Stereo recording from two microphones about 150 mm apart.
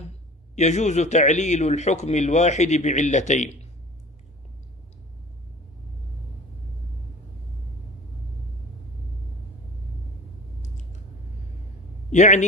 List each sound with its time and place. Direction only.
0.6 s a man's voice: 50° left (ahead or behind)
10.6 s a sound: 55° left (ahead or behind)
12.1 s a man's voice: 50° left (ahead or behind)